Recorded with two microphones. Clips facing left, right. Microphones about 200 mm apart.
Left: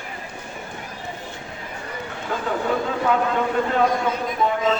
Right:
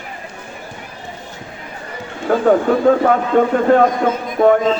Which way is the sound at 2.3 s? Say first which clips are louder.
Right 11 dB; 55° right (ahead or behind).